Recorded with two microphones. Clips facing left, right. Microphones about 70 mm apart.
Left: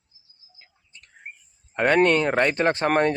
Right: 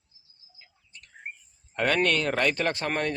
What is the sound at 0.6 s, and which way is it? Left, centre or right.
Bird, left.